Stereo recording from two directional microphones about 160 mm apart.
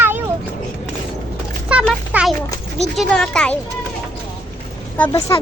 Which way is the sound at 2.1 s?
10° right (ahead or behind).